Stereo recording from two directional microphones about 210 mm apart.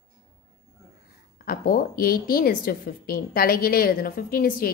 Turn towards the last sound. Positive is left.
turn(degrees=45)  # may be behind; listen again after turning